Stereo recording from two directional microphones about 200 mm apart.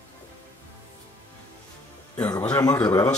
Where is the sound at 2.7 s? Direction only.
15° left (ahead or behind).